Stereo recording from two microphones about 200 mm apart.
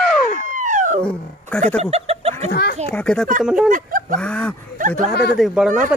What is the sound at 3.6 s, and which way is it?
Speech, 45° right (ahead or behind).